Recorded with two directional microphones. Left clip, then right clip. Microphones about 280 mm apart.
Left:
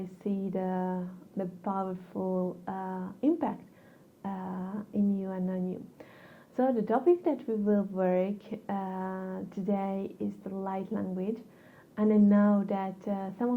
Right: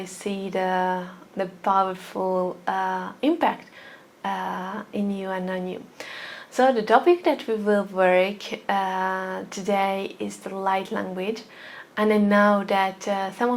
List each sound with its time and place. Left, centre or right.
0.0 s speech: centre
2.1 s speech: right
2.6 s speech: centre